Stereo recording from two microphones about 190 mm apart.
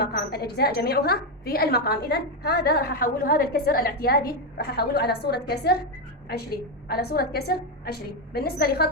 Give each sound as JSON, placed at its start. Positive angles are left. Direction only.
{"t": 0.0, "sound": "a woman's voice", "side_deg": 55}